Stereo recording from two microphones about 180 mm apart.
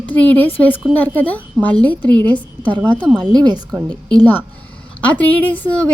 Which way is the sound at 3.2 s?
25° right (ahead or behind).